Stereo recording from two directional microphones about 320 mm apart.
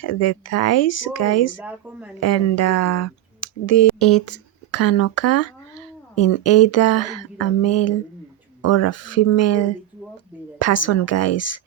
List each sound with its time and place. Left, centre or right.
0.0 s speech: left
1.6 s speech: centre
2.2 s speech: left